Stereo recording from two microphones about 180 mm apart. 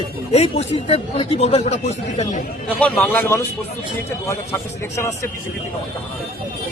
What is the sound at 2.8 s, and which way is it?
A man's voice, 5° left (ahead or behind).